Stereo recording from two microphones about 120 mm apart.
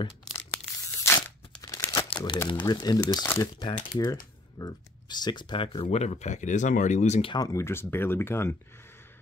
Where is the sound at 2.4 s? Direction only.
40° left (ahead or behind).